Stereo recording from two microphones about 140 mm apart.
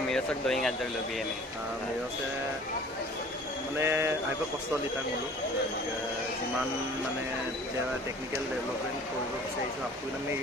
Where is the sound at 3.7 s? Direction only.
20° right (ahead or behind).